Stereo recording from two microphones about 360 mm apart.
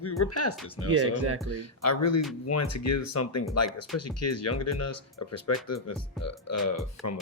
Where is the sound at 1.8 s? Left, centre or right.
Left.